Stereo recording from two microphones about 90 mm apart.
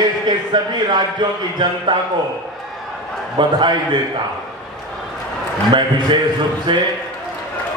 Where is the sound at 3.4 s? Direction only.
55° right (ahead or behind).